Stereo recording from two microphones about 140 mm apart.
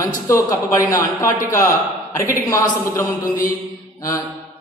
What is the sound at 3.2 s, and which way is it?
Speech, 75° left (ahead or behind).